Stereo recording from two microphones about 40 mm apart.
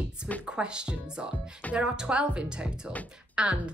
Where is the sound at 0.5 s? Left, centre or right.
Right.